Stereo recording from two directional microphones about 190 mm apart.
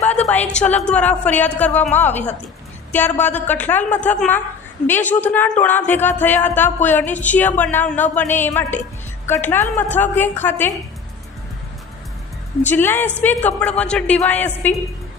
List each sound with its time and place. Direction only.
0.0 s a sound: 35° left (ahead or behind)
0.3 s a woman's voice: 5° left (ahead or behind)
12.6 s a woman's voice: 10° left (ahead or behind)